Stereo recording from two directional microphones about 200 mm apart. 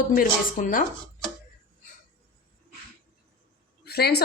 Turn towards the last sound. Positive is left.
turn(degrees=55)  # may be behind; listen again after turning